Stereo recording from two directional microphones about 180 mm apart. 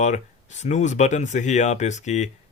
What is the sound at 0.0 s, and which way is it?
Speech, 40° left (ahead or behind).